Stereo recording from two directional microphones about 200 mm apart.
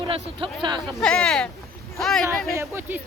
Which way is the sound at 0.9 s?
Centre (ahead or behind).